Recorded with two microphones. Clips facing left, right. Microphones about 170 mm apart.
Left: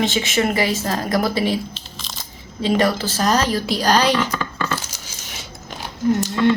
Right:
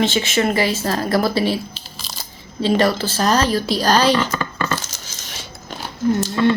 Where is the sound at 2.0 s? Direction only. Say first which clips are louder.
Right 2 dB; 5° right (ahead or behind).